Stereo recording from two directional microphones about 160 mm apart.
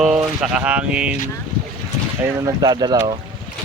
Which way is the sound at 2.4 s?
20° right (ahead or behind).